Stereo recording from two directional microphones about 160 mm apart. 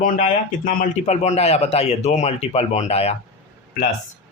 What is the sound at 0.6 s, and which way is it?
Speech, 50° left (ahead or behind).